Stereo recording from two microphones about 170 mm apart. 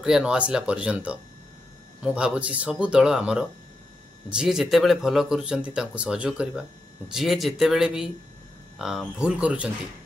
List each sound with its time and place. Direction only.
0.0 s speech: 5° right (ahead or behind)